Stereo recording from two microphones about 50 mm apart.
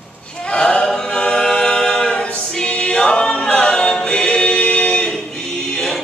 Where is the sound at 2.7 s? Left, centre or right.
Centre.